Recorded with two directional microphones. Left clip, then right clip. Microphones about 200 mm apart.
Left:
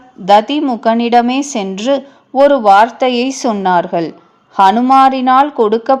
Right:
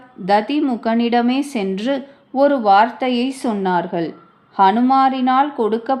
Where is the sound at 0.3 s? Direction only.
30° left (ahead or behind).